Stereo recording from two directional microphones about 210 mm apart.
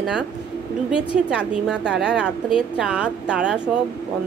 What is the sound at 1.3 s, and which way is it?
Speech, 5° right (ahead or behind).